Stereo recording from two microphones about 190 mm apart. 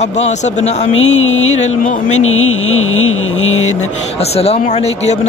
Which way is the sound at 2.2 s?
90° left.